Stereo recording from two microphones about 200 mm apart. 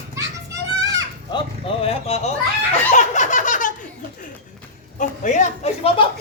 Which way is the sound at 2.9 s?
35° left (ahead or behind).